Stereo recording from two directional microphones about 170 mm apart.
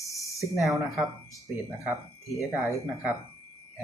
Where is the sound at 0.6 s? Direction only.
Centre (ahead or behind).